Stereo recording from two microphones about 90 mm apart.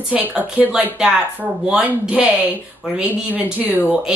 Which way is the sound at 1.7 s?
10° right (ahead or behind).